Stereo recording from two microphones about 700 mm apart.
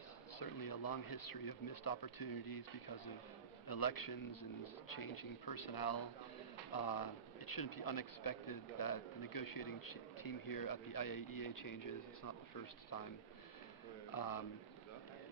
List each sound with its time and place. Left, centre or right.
0.4 s speech: left
3.6 s speech: left
14.1 s speech: left